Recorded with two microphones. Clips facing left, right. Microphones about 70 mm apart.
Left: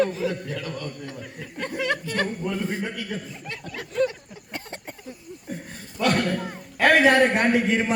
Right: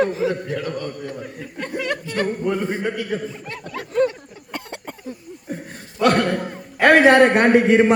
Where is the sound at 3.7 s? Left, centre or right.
Right.